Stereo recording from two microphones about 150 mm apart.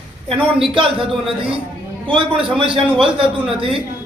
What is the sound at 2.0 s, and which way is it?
A woman's voice, 35° right (ahead or behind).